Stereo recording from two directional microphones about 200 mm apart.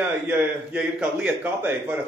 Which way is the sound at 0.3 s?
5° right (ahead or behind).